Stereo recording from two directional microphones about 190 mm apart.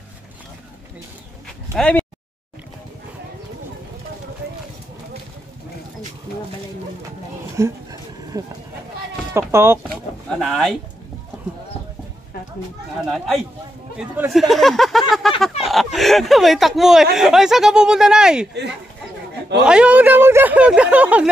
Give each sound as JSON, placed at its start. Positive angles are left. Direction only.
{"t": 1.8, "sound": "speech", "side_deg": 5}
{"t": 7.5, "sound": "a sound", "side_deg": -15}
{"t": 9.5, "sound": "speech", "side_deg": -15}
{"t": 9.8, "sound": "vehicle", "side_deg": 0}
{"t": 13.0, "sound": "speech", "side_deg": 0}
{"t": 19.6, "sound": "speech", "side_deg": -5}